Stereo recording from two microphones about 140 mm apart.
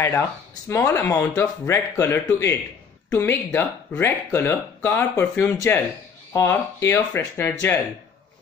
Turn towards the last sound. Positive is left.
turn(degrees=15)  # may be behind; listen again after turning